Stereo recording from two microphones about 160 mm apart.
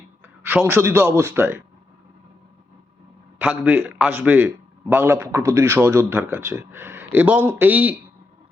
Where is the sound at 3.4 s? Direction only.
10° right (ahead or behind).